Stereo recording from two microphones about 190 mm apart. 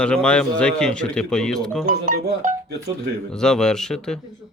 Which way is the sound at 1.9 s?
40° right (ahead or behind).